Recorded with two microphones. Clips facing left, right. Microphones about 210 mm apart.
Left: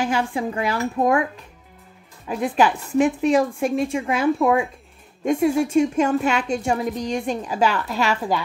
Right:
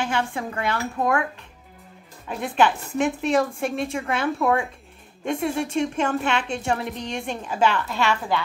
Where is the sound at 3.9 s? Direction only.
15° left (ahead or behind).